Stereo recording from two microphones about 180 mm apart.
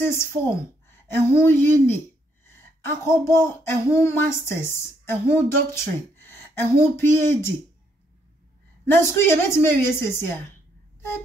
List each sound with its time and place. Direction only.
0.0 s a woman's voice: 15° left (ahead or behind)
8.8 s a woman's voice: 10° left (ahead or behind)